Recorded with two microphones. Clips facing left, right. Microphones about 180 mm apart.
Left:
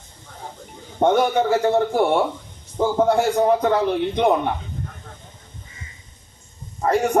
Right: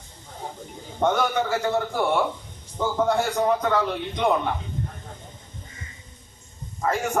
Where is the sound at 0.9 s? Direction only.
30° left (ahead or behind).